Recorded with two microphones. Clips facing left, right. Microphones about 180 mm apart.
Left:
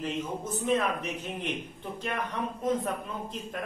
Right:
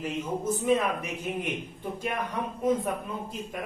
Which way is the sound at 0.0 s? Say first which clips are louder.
Right 3 dB; 10° right (ahead or behind).